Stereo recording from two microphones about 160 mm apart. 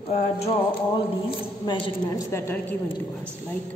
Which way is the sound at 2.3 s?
15° left (ahead or behind).